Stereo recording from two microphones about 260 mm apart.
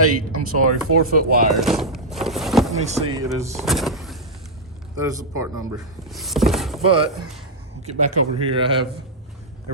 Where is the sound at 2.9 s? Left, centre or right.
Right.